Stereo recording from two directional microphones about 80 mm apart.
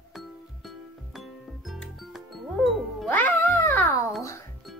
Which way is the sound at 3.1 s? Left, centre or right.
Left.